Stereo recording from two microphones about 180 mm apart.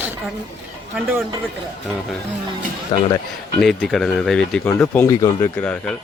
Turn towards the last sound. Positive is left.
turn(degrees=10)  # may be behind; listen again after turning